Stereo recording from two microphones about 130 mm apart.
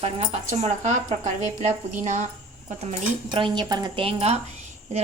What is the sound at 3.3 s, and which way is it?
A woman's voice, 35° right (ahead or behind).